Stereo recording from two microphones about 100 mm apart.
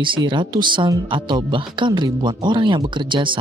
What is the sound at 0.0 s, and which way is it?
Speech, 55° right (ahead or behind).